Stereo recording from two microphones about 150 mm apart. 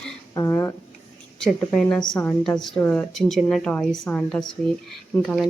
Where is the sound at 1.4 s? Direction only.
5° left (ahead or behind).